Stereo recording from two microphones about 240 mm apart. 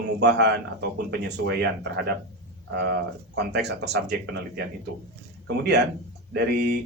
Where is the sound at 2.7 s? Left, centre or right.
Right.